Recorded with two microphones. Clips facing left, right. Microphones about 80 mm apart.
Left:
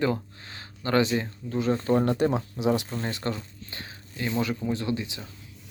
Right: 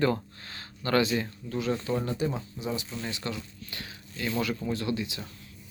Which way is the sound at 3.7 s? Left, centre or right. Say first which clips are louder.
Left 3 dB; left.